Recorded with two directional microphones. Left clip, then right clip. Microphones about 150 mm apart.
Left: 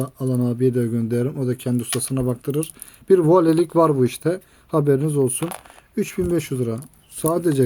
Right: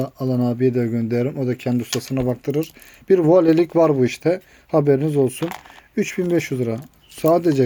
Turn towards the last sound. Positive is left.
turn(degrees=30)  # may be behind; listen again after turning